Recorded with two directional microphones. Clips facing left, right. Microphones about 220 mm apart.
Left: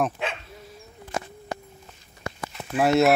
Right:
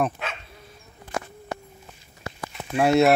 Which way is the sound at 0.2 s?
25° left (ahead or behind).